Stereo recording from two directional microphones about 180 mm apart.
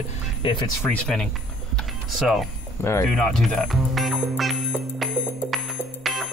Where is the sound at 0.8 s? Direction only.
5° left (ahead or behind).